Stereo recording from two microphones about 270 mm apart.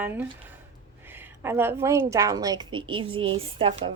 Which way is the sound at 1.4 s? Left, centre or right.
Centre.